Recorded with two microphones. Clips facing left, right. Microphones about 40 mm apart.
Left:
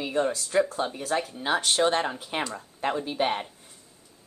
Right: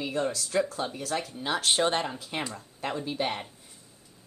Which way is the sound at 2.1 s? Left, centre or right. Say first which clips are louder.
Left 3 dB; left.